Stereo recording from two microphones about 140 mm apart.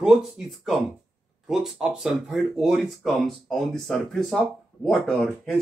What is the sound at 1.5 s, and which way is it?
Speech, 5° right (ahead or behind).